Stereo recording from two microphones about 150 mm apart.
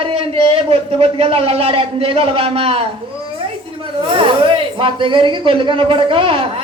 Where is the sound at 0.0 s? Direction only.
40° right (ahead or behind).